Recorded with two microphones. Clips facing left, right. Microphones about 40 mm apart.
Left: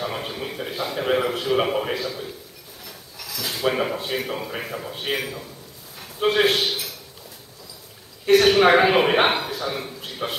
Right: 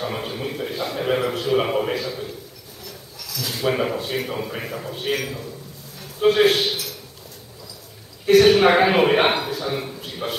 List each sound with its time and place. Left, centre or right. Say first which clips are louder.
0.0 s a man's voice: right 1 dB; centre
2.8 s a man's voice: right 1 dB; centre
8.3 s a man's voice: right 1 dB; centre
10.0 s a sound: even; centre